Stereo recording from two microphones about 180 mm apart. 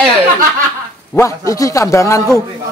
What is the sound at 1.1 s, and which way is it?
A man's voice, 15° left (ahead or behind).